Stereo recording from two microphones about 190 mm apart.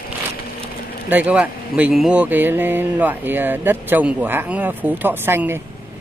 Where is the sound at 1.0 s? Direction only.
10° right (ahead or behind).